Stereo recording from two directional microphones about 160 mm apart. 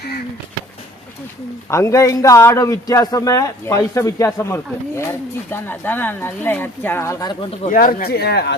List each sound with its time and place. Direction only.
1.7 s a man's voice: 20° left (ahead or behind)
7.7 s speech: 60° left (ahead or behind); by 8.5 s 90° left